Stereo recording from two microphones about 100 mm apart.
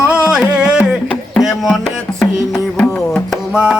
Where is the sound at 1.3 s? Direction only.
Centre (ahead or behind).